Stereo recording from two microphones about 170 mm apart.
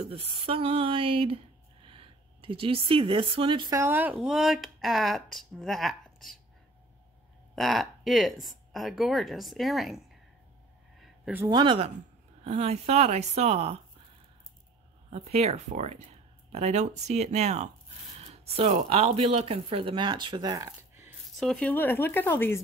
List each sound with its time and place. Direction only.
0.1 s speech: 35° right (ahead or behind)
3.8 s speech: 10° right (ahead or behind)
7.5 s speech: centre (ahead or behind)
11.0 s a sound: 5° right (ahead or behind)
11.4 s speech: 25° right (ahead or behind)
15.0 s speech: 40° right (ahead or behind); by 21.1 s 20° right (ahead or behind)
21.4 s speech: 5° left (ahead or behind)